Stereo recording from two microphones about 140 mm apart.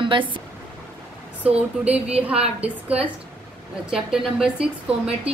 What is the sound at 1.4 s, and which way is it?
A woman's voice, 10° right (ahead or behind).